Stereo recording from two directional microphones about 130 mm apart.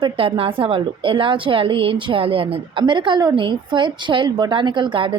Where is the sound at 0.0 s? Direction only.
40° right (ahead or behind).